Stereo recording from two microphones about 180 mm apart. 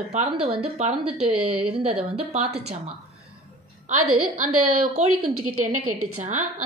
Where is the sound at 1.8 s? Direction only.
35° right (ahead or behind).